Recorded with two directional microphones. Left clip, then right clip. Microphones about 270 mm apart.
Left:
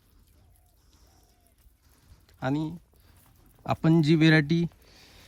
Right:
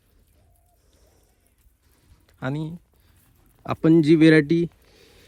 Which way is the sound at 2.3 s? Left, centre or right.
Centre.